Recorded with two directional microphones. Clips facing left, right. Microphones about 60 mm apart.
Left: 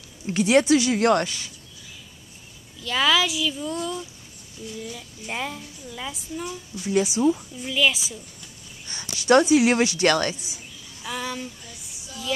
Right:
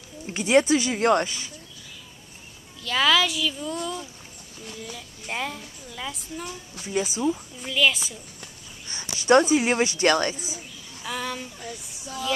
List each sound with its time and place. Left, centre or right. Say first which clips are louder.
0.6 s a woman's voice: even; centre
0.9 s speech: left 1 dB; centre
2.8 s a woman's voice: even; centre
8.8 s a sound: even; right
9.4 s a woman's voice: left 3 dB; centre
9.8 s speech: left 1 dB; right
10.3 s a woman's voice: right 3 dB; right
11.1 s a woman's voice: even; centre